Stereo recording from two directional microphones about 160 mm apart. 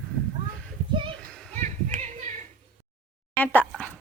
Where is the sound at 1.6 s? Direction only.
45° right (ahead or behind).